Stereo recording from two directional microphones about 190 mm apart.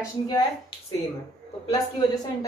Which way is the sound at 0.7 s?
25° left (ahead or behind).